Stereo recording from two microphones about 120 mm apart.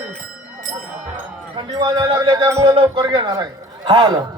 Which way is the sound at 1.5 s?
35° right (ahead or behind).